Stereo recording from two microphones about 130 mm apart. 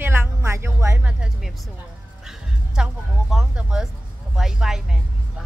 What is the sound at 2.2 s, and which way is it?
Music, 5° right (ahead or behind).